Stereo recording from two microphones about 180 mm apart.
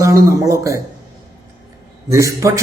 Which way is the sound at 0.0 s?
15° right (ahead or behind).